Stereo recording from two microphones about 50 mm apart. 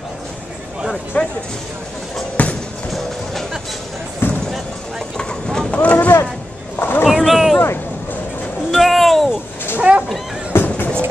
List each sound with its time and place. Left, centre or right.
1.1 s speech: left
2.4 s music: left
4.2 s basketball bounce: left
5.1 s vehicle: centre
5.8 s boat: left
6.8 s boat: left
7.1 s boat: centre
8.7 s a sound: centre
9.8 s a sound: right
10.5 s music: left